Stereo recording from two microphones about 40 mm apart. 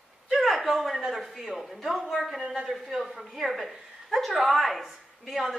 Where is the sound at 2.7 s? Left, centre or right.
Centre.